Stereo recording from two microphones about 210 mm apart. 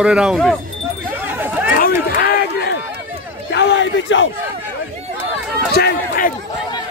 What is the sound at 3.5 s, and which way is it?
Speech, 60° left (ahead or behind).